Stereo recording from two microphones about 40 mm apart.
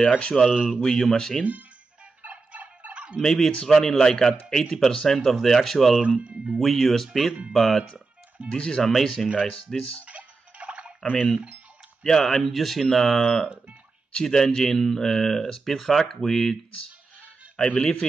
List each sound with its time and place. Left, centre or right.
0.2 s a man's voice: left
0.8 s speech: centre
2.2 s fowl: right
3.2 s speech: centre
6.2 s speech: right
6.6 s speech: centre
8.5 s a man's voice: left
8.8 s speech: centre
10.0 s tick-tock: right
11.1 s speech: left
12.0 s speech: centre
17.6 s a man's voice: left